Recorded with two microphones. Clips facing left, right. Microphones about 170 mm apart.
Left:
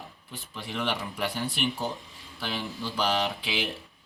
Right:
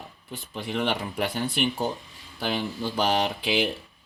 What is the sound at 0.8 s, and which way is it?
Speech, 55° right (ahead or behind).